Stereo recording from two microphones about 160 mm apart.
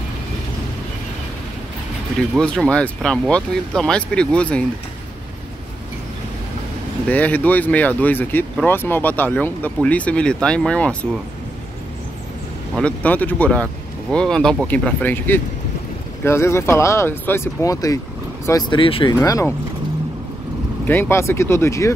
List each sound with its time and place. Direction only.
2.3 s speech: 5° left (ahead or behind)
7.1 s speech: 10° left (ahead or behind)
12.7 s speech: 10° left (ahead or behind); by 19.1 s 35° left (ahead or behind)
19.1 s speech: 20° left (ahead or behind)
20.8 s speech: 15° left (ahead or behind)